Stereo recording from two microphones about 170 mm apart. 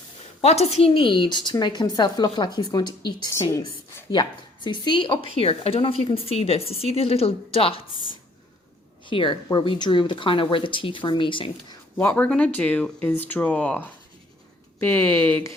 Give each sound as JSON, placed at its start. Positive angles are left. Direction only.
{"t": 0.4, "sound": "a woman's voice", "side_deg": 40}
{"t": 9.0, "sound": "a woman's voice", "side_deg": 30}
{"t": 11.9, "sound": "speech", "side_deg": 10}